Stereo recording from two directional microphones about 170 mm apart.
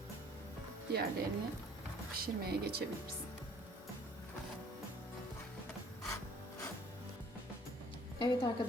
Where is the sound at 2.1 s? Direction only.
65° right (ahead or behind).